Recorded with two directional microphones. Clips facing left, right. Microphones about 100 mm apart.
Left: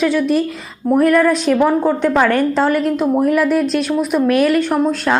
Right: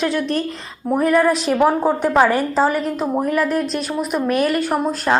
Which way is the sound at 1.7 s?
15° right (ahead or behind).